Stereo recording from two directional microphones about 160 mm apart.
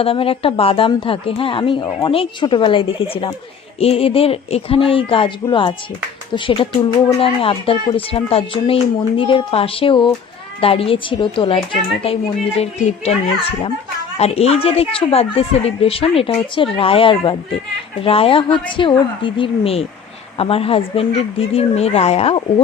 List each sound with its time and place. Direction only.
0.0 s speech: 35° left (ahead or behind)
14.2 s speech: 40° left (ahead or behind)